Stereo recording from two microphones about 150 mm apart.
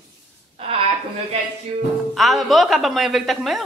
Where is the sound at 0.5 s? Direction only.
40° right (ahead or behind).